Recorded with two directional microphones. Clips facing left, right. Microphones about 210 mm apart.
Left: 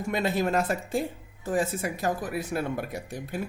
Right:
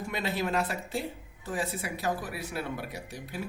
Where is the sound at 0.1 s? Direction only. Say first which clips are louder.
Left 5 dB; 45° left (ahead or behind).